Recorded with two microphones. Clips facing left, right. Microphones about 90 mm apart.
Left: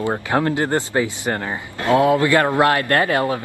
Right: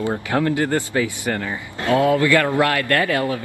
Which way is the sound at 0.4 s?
30° left (ahead or behind).